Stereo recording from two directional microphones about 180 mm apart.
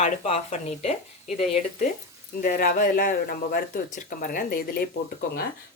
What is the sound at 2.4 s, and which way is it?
Speech, 50° left (ahead or behind).